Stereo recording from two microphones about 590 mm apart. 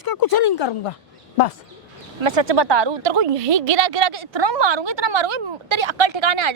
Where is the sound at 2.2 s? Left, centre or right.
Right.